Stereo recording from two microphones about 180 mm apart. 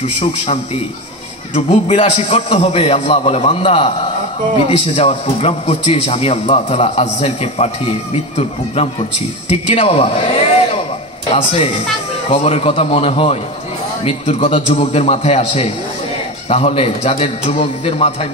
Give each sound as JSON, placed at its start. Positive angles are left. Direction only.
{"t": 0.0, "sound": "a man's voice", "side_deg": 40}
{"t": 1.5, "sound": "a man's voice", "side_deg": 30}
{"t": 9.8, "sound": "a sound", "side_deg": 35}
{"t": 12.3, "sound": "a man's voice", "side_deg": 30}